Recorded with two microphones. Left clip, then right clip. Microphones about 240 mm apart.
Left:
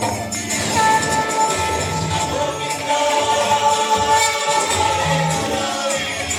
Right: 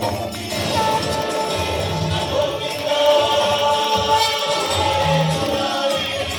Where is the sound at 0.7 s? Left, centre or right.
Left.